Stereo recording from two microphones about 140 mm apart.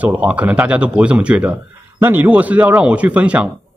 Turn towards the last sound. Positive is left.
turn(degrees=-10)  # may be behind; listen again after turning